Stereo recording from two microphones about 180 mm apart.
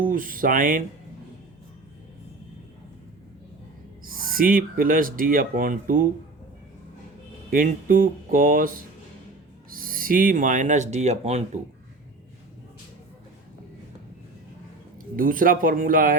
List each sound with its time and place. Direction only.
0.0 s speech: 50° right (ahead or behind)
4.0 s speech: 50° right (ahead or behind)
7.5 s speech: 50° right (ahead or behind)
15.1 s speech: 50° right (ahead or behind)